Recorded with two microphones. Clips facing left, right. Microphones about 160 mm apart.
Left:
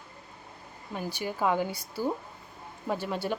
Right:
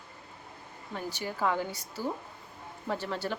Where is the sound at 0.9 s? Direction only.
15° left (ahead or behind).